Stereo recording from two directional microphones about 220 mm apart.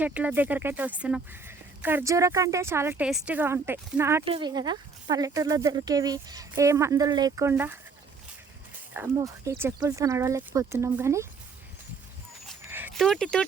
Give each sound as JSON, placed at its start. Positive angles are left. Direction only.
{"t": 0.0, "sound": "speech", "side_deg": -5}
{"t": 8.9, "sound": "speech", "side_deg": -10}
{"t": 12.6, "sound": "dog", "side_deg": -10}
{"t": 12.9, "sound": "speech", "side_deg": 0}